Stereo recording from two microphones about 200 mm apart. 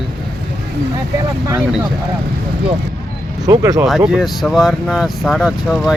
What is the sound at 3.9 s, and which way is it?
Speech, centre (ahead or behind).